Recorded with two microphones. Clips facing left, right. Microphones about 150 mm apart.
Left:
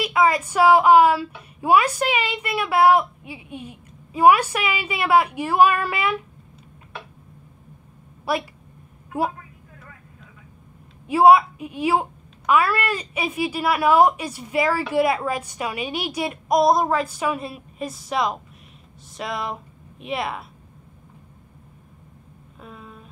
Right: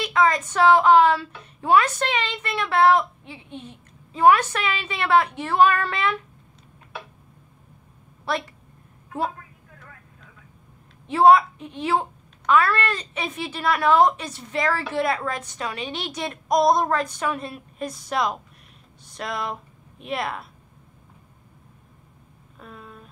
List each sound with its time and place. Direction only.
0.0 s a woman's voice: 10° left (ahead or behind)
8.3 s a woman's voice: 10° left (ahead or behind)
11.1 s a woman's voice: 10° left (ahead or behind)
22.6 s a sound: centre (ahead or behind)